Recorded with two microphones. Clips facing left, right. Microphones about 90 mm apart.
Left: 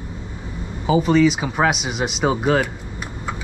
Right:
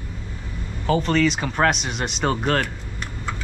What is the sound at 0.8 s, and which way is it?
Speech, 5° left (ahead or behind).